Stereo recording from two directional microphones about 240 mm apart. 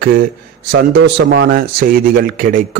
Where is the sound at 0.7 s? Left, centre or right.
Right.